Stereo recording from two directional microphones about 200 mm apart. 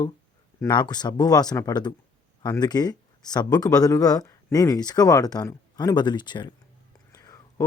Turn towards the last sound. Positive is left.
turn(degrees=15)  # may be behind; listen again after turning